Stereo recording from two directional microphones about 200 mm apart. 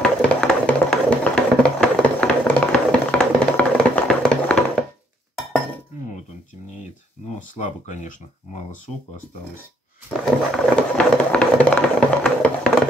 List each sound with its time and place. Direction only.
0.0 s music: 5° left (ahead or behind)
7.5 s speech: 40° left (ahead or behind)
10.2 s a sound: 5° left (ahead or behind)